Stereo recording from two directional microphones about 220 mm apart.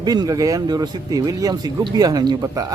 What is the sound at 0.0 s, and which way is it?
Speech, 20° right (ahead or behind).